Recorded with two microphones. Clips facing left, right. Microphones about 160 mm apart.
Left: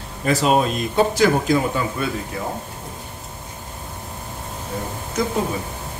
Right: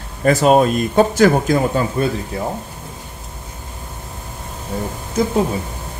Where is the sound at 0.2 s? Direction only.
50° right (ahead or behind).